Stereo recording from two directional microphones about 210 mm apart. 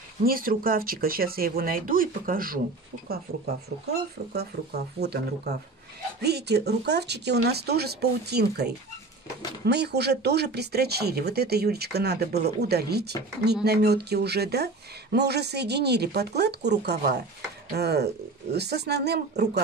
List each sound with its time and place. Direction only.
0.2 s speech: 45° right (ahead or behind)
3.8 s speech: 50° right (ahead or behind)